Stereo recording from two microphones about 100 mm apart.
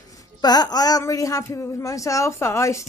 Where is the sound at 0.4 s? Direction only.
40° left (ahead or behind).